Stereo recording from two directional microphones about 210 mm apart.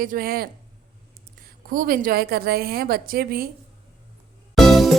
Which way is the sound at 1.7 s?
40° right (ahead or behind).